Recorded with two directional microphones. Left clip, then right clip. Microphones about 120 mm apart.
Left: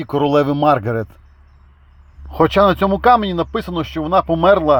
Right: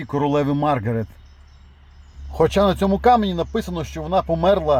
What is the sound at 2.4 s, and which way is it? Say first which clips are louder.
Speech: left 5 dB; 20° left (ahead or behind).